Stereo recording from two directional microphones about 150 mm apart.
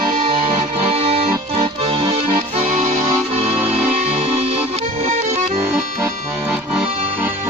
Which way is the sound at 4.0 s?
50° right (ahead or behind).